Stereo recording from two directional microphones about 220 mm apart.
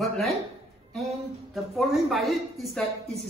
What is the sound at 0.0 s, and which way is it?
A man's voice, centre (ahead or behind).